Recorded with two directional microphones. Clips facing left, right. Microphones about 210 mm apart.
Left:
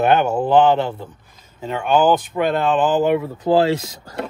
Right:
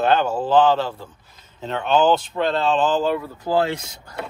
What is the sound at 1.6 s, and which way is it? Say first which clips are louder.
Speech: left 2 dB; 10° left (ahead or behind).